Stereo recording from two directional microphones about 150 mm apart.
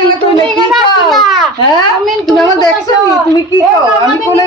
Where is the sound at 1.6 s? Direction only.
30° left (ahead or behind).